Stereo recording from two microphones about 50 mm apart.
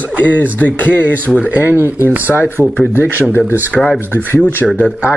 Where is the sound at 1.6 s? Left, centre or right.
Right.